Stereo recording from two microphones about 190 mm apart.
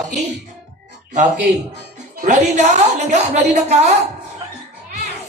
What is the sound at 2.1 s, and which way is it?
Speech, 40° right (ahead or behind).